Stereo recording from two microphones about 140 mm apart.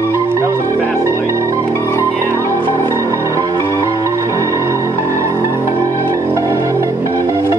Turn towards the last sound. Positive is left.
turn(degrees=-20)  # may be behind; listen again after turning